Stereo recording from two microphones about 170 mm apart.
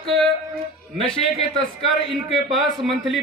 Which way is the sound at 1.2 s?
35° left (ahead or behind).